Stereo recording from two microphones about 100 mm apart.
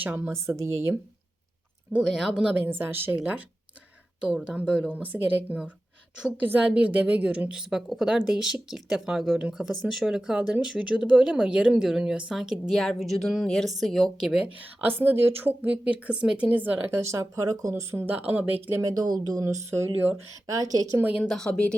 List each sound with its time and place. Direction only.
0.0 s a woman's voice: 20° right (ahead or behind)
2.0 s a woman's voice: centre (ahead or behind)
4.9 s a woman's voice: 15° right (ahead or behind)
14.6 s a woman's voice: 20° right (ahead or behind)
18.7 s speech: 35° right (ahead or behind)
21.0 s a woman's voice: 15° right (ahead or behind)
21.2 s speech: 5° left (ahead or behind)